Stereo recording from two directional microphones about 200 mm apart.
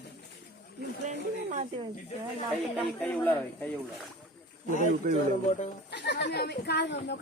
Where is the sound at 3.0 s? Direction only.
5° left (ahead or behind).